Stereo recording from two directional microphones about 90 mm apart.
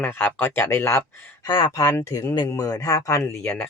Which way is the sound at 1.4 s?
70° left (ahead or behind).